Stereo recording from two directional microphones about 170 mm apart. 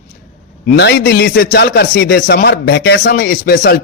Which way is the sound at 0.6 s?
70° left (ahead or behind).